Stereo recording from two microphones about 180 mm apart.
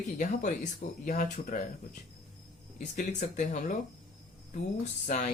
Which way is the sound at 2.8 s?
45° left (ahead or behind).